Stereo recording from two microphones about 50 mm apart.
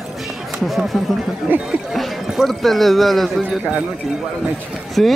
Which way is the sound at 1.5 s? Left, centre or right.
Right.